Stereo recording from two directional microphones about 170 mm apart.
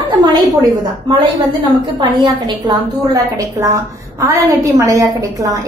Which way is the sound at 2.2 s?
25° right (ahead or behind).